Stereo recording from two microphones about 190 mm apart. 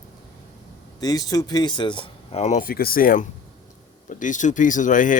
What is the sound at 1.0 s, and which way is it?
Speech, 20° left (ahead or behind).